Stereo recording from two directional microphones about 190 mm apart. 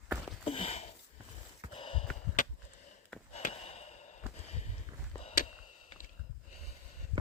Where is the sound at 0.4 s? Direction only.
30° left (ahead or behind).